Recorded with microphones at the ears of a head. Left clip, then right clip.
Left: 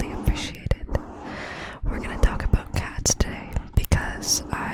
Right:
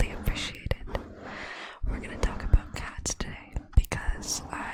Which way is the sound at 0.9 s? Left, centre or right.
Left.